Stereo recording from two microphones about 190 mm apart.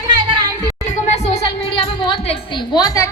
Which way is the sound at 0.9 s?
35° left (ahead or behind).